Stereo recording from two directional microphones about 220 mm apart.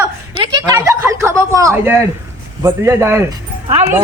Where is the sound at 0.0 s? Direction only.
15° right (ahead or behind).